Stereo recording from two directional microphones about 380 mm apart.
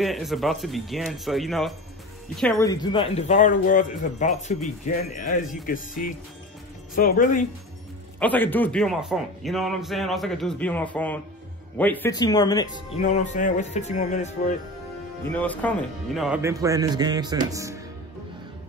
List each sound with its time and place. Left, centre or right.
0.0 s a man's voice: centre; by 7.4 s left
8.2 s a man's voice: centre
15.3 s a man's voice: centre